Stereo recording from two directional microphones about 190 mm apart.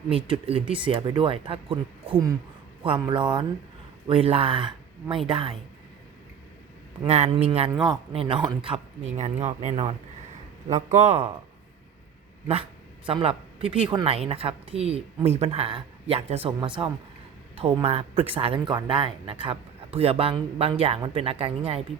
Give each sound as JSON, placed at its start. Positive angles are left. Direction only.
{"t": 0.1, "sound": "speech", "side_deg": -30}
{"t": 7.1, "sound": "speech", "side_deg": -35}
{"t": 7.7, "sound": "speech", "side_deg": -20}
{"t": 8.1, "sound": "speech", "side_deg": -30}
{"t": 10.9, "sound": "speech", "side_deg": -35}
{"t": 13.1, "sound": "speech", "side_deg": -30}